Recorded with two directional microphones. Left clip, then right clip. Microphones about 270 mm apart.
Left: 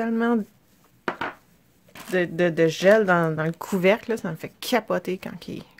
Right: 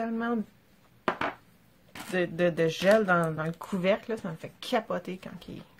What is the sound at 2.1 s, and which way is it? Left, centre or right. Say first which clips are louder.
Speech: left 5 dB; left.